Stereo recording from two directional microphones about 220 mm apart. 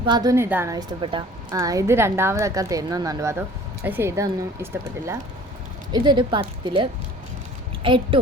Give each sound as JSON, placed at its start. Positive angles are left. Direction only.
{"t": 0.0, "sound": "a woman's voice", "side_deg": -20}